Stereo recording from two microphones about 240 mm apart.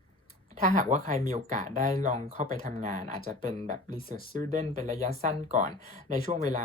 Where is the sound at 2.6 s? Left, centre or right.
Right.